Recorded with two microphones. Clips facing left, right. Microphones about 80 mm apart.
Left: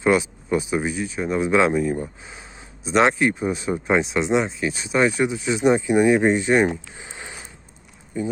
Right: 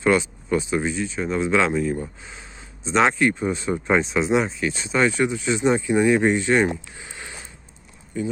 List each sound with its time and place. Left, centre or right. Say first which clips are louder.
0.0 s speech: left 1 dB; centre